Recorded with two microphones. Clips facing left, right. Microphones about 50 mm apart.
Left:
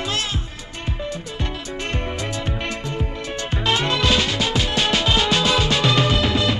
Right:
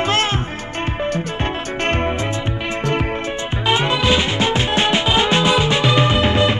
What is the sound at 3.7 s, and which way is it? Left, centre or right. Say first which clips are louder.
Music: right 3 dB; centre.